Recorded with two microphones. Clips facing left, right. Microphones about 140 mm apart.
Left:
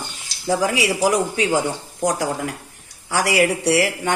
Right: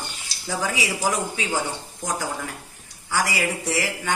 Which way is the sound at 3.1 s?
75° left (ahead or behind).